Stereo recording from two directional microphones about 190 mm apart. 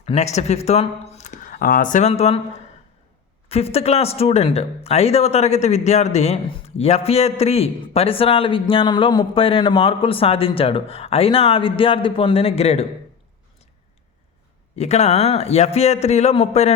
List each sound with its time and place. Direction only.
0.0 s speech: 35° left (ahead or behind)
3.5 s speech: 30° left (ahead or behind)
14.8 s speech: 35° left (ahead or behind)